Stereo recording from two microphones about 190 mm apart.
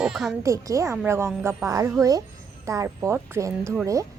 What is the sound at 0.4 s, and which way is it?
A woman's voice, 15° right (ahead or behind).